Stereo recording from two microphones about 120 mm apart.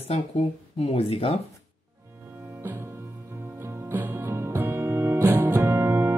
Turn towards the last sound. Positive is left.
turn(degrees=-20)  # may be behind; listen again after turning